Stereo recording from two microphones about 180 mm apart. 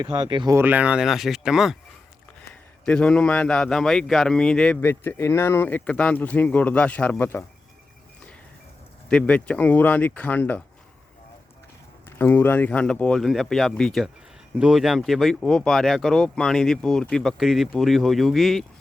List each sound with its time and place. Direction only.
0.0 s speech: 25° right (ahead or behind)
0.5 s a man's voice: 10° right (ahead or behind); by 7.4 s 10° left (ahead or behind)
9.0 s a man's voice: 5° left (ahead or behind)
12.2 s speech: 10° left (ahead or behind)